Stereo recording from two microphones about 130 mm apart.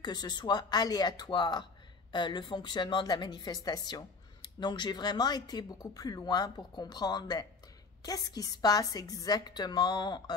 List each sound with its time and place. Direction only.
0.0 s speech: 35° left (ahead or behind)